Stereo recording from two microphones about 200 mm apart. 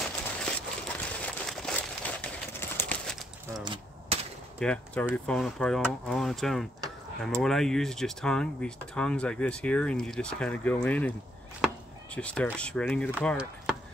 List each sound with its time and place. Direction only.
0.0 s crumpling: 5° left (ahead or behind)
3.6 s gunshot: 25° right (ahead or behind)
4.6 s speech: 5° left (ahead or behind)
11.6 s chop: 5° left (ahead or behind)
12.5 s speech: 5° left (ahead or behind)